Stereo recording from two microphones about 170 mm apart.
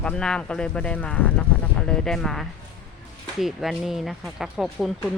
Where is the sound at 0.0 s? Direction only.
5° left (ahead or behind).